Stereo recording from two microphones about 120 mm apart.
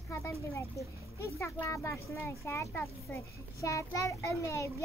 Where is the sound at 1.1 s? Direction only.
25° left (ahead or behind).